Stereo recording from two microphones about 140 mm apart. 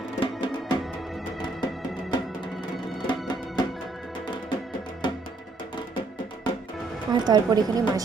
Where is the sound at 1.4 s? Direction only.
30° left (ahead or behind).